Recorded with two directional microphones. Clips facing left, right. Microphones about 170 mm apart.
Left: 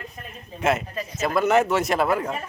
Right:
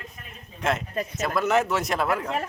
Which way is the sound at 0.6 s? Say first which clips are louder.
Left 3 dB; 5° left (ahead or behind).